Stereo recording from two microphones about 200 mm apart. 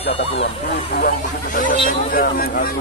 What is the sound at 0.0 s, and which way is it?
Speech, 30° left (ahead or behind).